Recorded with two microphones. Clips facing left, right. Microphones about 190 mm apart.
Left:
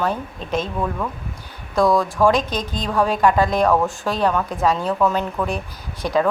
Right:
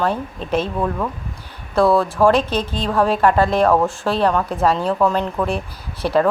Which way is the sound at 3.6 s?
10° right (ahead or behind).